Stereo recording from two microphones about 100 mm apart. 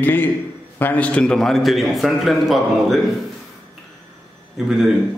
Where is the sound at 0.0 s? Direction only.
20° left (ahead or behind); by 3.0 s centre (ahead or behind).